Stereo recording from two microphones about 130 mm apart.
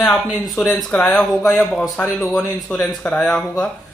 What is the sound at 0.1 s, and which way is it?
A man's voice, 5° left (ahead or behind).